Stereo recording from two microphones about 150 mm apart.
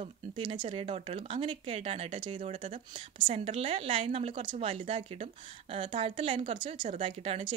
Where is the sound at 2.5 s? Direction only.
55° right (ahead or behind).